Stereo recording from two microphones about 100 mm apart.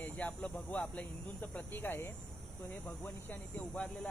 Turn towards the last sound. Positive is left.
turn(degrees=15)  # may be behind; listen again after turning